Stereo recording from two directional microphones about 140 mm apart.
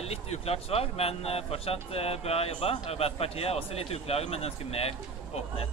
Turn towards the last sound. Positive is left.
turn(degrees=45)  # may be behind; listen again after turning